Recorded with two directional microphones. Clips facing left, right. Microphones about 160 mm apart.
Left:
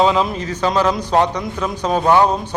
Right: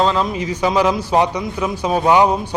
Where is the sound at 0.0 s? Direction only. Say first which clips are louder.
Left 2 dB; 5° left (ahead or behind).